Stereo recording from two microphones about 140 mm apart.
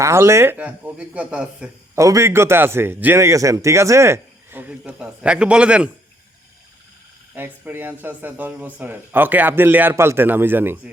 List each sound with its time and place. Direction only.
0.0 s a man's voice: 20° right (ahead or behind)
2.0 s a man's voice: 20° right (ahead or behind)
7.3 s a man's voice: 15° right (ahead or behind)